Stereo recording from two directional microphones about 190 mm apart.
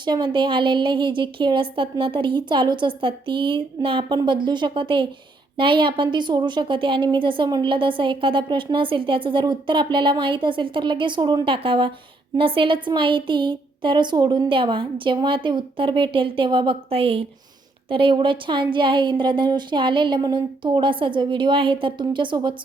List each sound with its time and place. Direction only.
0.0 s a woman's voice: 25° right (ahead or behind)